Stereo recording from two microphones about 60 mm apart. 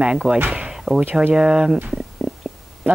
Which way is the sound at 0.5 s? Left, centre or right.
Centre.